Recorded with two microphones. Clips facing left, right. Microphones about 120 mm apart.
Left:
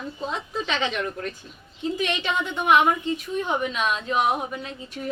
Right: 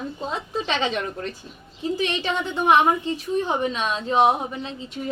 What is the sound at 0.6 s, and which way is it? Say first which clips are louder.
A woman's voice: right 2 dB; 35° right (ahead or behind).